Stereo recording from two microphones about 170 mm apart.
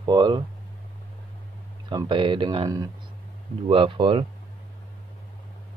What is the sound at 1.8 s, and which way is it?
Speech, 30° right (ahead or behind).